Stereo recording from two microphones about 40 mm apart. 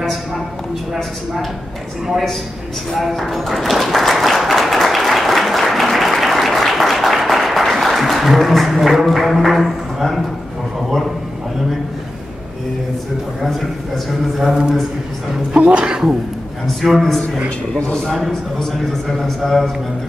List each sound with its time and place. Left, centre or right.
0.9 s a man's voice: centre
2.9 s a man's voice: centre
3.3 s applause: centre
13.4 s a man's voice: centre
14.5 s a man's voice: centre
15.5 s speech: right
16.8 s a man's voice: centre
19.1 s a man's voice: centre